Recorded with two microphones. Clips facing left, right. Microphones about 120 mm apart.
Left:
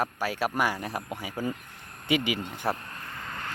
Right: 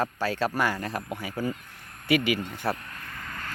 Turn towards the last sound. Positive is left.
turn(degrees=20)  # may be behind; listen again after turning